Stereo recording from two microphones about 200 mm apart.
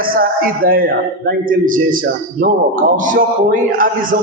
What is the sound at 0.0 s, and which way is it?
Speech, 45° right (ahead or behind).